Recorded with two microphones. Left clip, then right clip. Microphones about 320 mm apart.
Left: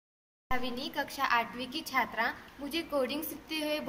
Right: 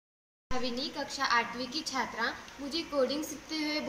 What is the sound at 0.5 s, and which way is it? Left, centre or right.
A woman's voice, centre.